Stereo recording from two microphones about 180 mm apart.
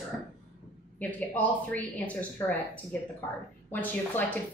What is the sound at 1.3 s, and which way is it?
Speech, 10° left (ahead or behind).